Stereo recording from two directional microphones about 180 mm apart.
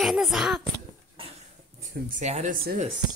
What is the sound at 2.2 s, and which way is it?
Speech, 40° right (ahead or behind).